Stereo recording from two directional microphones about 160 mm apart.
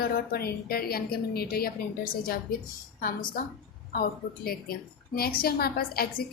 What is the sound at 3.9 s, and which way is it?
A woman's voice, 70° left (ahead or behind).